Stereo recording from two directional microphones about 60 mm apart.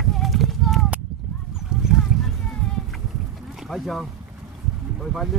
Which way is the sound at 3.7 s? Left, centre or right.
Centre.